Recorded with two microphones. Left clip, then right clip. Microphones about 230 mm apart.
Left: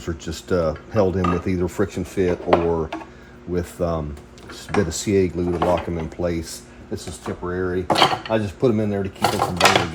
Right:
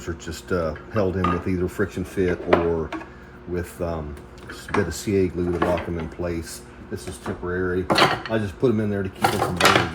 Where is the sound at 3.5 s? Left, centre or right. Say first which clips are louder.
Left 4 dB; left.